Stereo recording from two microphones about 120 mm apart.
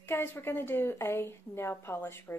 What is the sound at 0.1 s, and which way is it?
A woman's voice, 20° left (ahead or behind).